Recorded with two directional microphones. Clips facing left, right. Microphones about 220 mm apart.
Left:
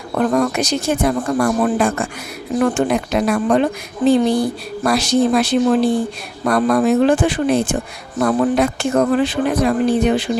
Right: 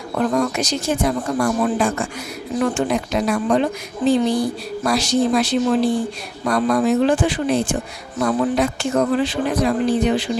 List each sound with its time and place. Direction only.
0.2 s a woman's voice: 55° left (ahead or behind)